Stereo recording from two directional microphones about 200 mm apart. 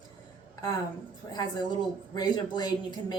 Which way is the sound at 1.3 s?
20° left (ahead or behind).